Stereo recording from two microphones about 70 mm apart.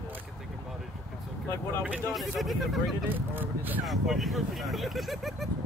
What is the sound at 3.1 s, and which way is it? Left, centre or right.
Speech, right.